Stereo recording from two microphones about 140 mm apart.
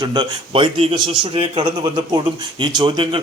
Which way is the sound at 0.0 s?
35° right (ahead or behind).